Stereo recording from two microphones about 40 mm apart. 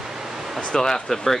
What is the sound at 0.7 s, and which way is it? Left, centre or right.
Speech, centre.